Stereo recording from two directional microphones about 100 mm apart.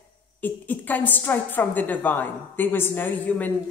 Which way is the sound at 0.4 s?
15° left (ahead or behind).